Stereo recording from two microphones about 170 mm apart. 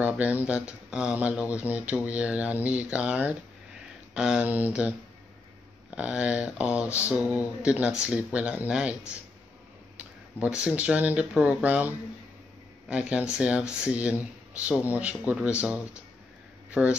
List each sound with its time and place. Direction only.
0.0 s speech: 10° right (ahead or behind)
9.9 s speech: 5° right (ahead or behind)
16.8 s speech: 10° right (ahead or behind)